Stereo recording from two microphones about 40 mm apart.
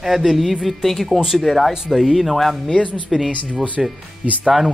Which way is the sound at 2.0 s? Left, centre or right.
Centre.